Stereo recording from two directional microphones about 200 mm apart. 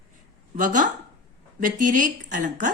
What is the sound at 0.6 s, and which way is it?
A woman's voice, 40° right (ahead or behind).